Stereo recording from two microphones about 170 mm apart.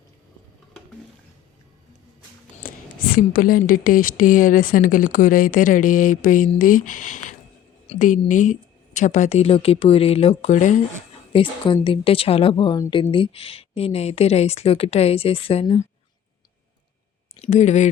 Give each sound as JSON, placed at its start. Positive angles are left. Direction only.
{"t": 2.6, "sound": "a woman's voice", "side_deg": 55}
{"t": 11.3, "sound": "speech", "side_deg": 30}
{"t": 17.4, "sound": "a woman's voice", "side_deg": 40}